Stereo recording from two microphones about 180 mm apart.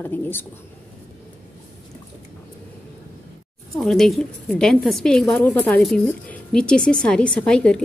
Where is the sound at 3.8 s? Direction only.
Centre (ahead or behind).